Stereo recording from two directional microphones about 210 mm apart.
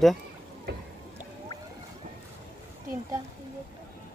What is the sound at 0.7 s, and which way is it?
Speech, 50° right (ahead or behind).